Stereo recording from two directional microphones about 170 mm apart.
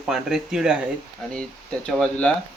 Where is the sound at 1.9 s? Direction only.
5° left (ahead or behind).